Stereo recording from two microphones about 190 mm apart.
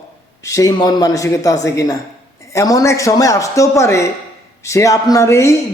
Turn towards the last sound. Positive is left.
turn(degrees=15)  # may be behind; listen again after turning